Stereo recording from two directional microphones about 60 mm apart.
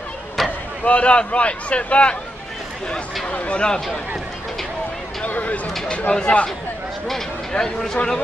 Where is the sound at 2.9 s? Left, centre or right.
Centre.